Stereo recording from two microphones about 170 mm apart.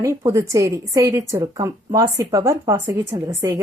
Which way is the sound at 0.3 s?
15° right (ahead or behind).